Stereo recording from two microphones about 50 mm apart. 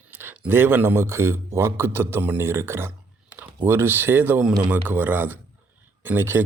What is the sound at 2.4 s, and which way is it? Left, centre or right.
Speech, right.